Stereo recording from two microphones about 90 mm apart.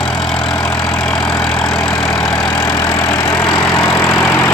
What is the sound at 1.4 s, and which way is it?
Vehicle, 5° left (ahead or behind).